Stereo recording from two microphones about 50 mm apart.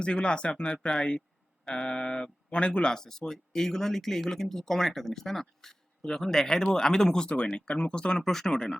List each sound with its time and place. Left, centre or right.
0.0 s speech: left
8.2 s speech: centre